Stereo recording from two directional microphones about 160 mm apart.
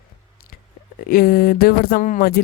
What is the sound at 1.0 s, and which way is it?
Speech, 65° left (ahead or behind).